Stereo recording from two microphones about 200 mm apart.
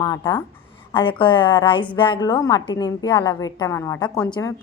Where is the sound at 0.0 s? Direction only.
20° left (ahead or behind).